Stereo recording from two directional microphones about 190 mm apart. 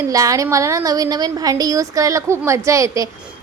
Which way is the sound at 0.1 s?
15° right (ahead or behind).